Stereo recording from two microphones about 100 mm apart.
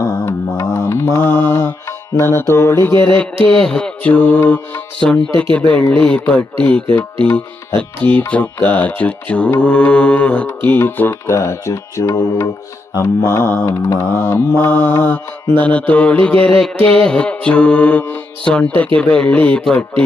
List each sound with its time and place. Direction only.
0.0 s mantra: 30° left (ahead or behind)
3.2 s mantra: 10° left (ahead or behind)
5.5 s mantra: 15° left (ahead or behind)
7.3 s mantra: 25° left (ahead or behind)
7.8 s mantra: 15° left (ahead or behind)